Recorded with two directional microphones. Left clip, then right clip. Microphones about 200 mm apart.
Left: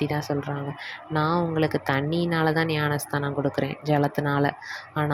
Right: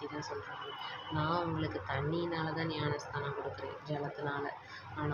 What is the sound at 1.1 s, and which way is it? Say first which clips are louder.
Speech: left 11 dB; 45° left (ahead or behind).